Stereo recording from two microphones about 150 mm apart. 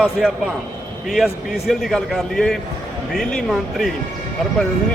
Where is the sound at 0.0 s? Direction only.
5° right (ahead or behind).